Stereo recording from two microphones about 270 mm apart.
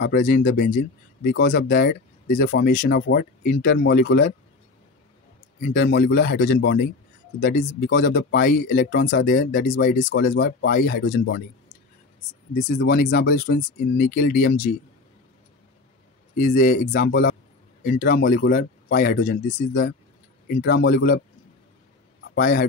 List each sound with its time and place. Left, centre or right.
0.0 s speech: left
5.6 s speech: left
10.0 s speech: left
12.7 s speech: left
16.3 s speech: left
22.3 s a man's voice: left